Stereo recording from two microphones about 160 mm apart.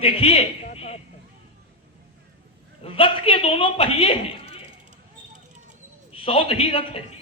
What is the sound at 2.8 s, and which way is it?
A man's voice, 35° left (ahead or behind).